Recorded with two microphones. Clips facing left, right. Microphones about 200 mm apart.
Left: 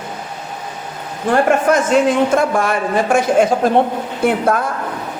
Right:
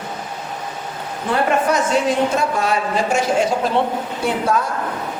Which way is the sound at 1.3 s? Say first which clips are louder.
Left 4 dB; 50° left (ahead or behind).